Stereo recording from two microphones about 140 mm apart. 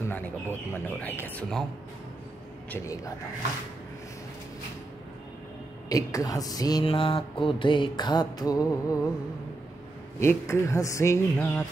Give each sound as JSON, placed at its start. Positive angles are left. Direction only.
{"t": 0.0, "sound": "speech", "side_deg": 15}
{"t": 5.9, "sound": "speech", "side_deg": 25}
{"t": 6.9, "sound": "mantra", "side_deg": 40}
{"t": 10.2, "sound": "speech", "side_deg": 20}